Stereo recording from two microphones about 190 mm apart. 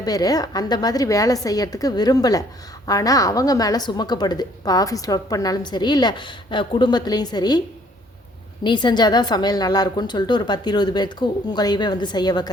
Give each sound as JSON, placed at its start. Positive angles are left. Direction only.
{"t": 0.0, "sound": "a woman's voice", "side_deg": 20}
{"t": 8.6, "sound": "a woman's voice", "side_deg": 25}